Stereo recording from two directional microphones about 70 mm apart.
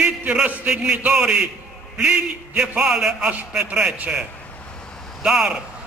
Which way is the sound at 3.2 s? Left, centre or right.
Centre.